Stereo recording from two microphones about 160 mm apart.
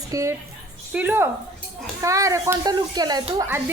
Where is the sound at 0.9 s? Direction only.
10° right (ahead or behind).